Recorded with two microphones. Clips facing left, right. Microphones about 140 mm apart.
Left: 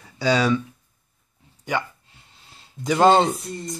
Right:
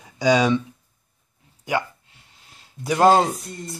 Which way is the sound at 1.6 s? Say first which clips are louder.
Right 2 dB; 10° right (ahead or behind).